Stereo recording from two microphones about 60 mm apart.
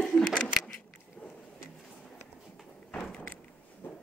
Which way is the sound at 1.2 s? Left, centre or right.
Centre.